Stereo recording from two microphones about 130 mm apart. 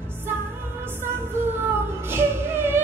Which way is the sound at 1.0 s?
15° right (ahead or behind).